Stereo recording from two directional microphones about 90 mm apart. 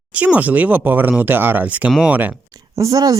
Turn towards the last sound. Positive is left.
turn(degrees=-40)  # may be behind; listen again after turning